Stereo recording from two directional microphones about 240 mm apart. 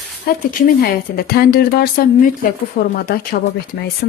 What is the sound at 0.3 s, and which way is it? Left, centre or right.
Speech, left.